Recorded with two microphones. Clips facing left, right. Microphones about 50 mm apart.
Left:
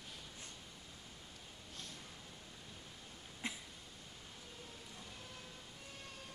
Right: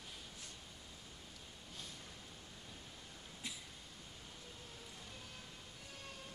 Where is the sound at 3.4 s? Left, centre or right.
Left.